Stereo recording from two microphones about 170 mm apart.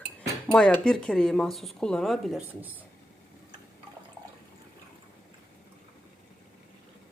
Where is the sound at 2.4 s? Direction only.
10° right (ahead or behind).